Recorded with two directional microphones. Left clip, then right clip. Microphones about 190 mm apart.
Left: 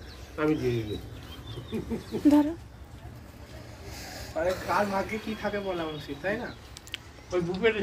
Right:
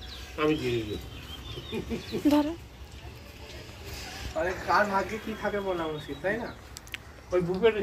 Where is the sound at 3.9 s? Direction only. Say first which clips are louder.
Right 1 dB; 60° left (ahead or behind).